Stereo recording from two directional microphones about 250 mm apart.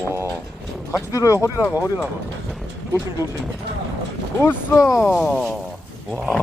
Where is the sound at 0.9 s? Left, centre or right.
Centre.